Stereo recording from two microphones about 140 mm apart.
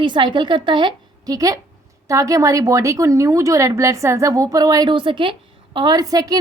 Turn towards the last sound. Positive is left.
turn(degrees=-25)  # may be behind; listen again after turning